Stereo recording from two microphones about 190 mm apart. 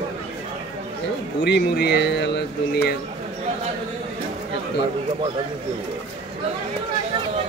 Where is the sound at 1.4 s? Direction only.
60° left (ahead or behind).